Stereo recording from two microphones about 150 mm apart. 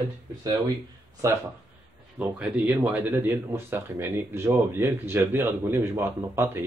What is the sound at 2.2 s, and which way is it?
Speech, 10° right (ahead or behind).